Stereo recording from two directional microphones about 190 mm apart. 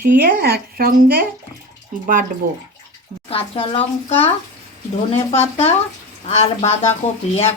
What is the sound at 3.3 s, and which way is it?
A child's voice, 30° left (ahead or behind).